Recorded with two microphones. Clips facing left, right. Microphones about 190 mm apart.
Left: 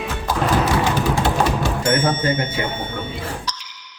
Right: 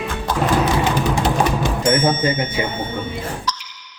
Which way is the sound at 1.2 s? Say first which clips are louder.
Right 1 dB; 15° right (ahead or behind).